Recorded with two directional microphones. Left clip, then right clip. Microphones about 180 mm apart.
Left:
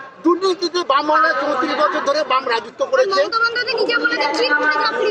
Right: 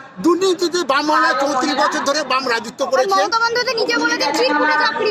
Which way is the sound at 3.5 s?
60° right (ahead or behind).